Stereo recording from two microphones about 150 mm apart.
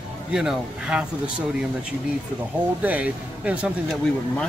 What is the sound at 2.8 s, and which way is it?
Speech, 10° right (ahead or behind).